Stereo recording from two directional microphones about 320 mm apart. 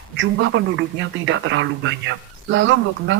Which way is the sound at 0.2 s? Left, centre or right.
Right.